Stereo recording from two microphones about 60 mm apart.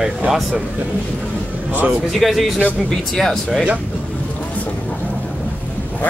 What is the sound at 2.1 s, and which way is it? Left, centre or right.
Speech, centre.